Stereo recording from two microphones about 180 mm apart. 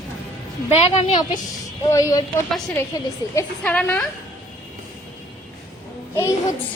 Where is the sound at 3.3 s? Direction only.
10° left (ahead or behind).